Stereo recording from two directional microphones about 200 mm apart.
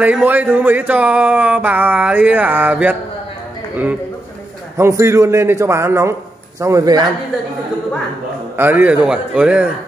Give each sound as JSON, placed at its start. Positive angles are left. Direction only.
{"t": 0.0, "sound": "speech", "side_deg": -10}
{"t": 4.7, "sound": "speech", "side_deg": -15}
{"t": 8.5, "sound": "speech", "side_deg": -10}